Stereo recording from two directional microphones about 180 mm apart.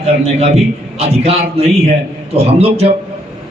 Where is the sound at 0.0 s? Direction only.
35° right (ahead or behind).